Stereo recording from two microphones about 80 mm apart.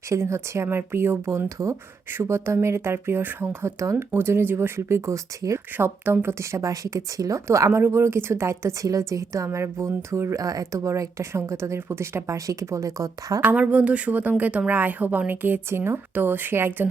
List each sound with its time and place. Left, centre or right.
0.1 s a woman's voice: right
1.5 s a woman's voice: right
5.7 s a woman's voice: right
13.4 s a woman's voice: centre